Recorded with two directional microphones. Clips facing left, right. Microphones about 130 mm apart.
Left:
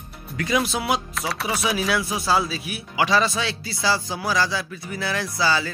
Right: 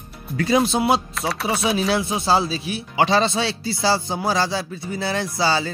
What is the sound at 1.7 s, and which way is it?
Music, 25° right (ahead or behind).